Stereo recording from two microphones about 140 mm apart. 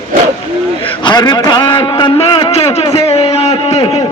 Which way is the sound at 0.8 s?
35° left (ahead or behind).